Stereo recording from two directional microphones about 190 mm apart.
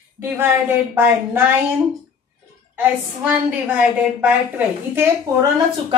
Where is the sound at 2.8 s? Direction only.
10° right (ahead or behind).